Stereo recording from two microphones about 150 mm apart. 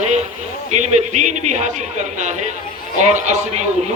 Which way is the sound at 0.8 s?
50° right (ahead or behind).